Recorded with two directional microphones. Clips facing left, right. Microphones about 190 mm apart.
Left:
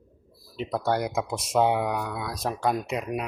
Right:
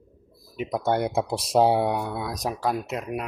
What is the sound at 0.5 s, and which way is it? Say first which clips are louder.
Speech: right 1 dB; 15° right (ahead or behind).